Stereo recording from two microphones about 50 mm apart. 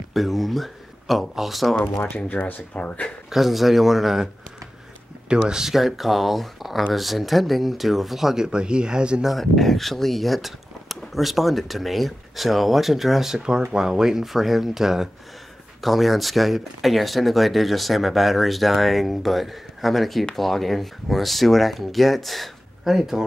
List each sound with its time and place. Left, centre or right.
0.1 s speech: centre
2.1 s speech: left
3.3 s speech: centre
5.5 s speech: centre
8.5 s speech: centre
9.2 s speech: centre